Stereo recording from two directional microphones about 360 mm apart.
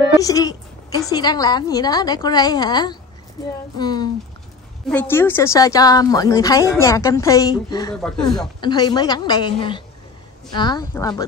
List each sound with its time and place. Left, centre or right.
0.2 s a woman's voice: centre